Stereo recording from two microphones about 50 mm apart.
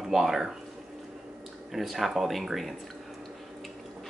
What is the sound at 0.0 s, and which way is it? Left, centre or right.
Speech, centre.